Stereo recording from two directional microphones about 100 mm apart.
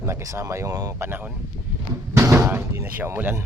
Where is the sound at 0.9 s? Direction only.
20° right (ahead or behind).